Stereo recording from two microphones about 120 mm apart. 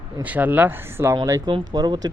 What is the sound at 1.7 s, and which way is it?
Speech, 35° right (ahead or behind).